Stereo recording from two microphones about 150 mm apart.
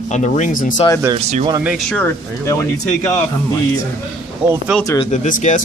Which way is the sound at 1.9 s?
15° left (ahead or behind).